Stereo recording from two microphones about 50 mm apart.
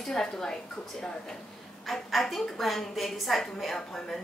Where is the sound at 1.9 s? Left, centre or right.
Centre.